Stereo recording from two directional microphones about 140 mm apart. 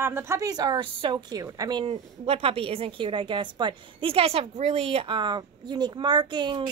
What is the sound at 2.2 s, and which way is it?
A woman's voice, 45° right (ahead or behind).